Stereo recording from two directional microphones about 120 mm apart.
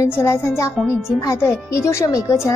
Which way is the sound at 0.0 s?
20° left (ahead or behind).